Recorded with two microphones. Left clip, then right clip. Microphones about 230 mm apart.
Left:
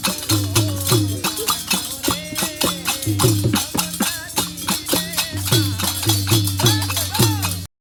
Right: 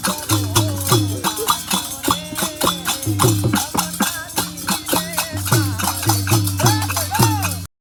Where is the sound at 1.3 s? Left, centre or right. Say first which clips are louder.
Right 3 dB; right.